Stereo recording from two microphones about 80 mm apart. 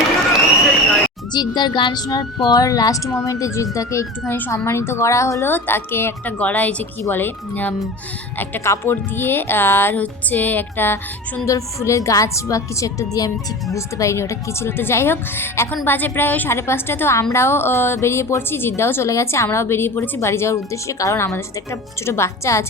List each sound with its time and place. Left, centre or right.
1.3 s speech: left
4.3 s speech: left
4.5 s speech: left
5.5 s speech: left
6.4 s speech: centre
8.6 s speech: left
11.4 s speech: left